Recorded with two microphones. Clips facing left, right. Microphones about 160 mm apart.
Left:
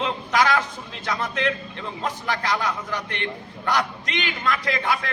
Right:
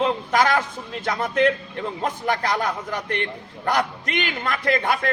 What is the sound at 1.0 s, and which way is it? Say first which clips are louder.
A man's voice: right 5 dB; 45° right (ahead or behind).